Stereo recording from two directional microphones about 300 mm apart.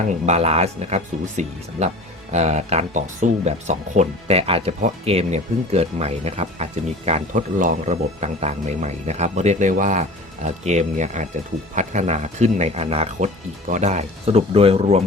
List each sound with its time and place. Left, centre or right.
0.3 s speech: right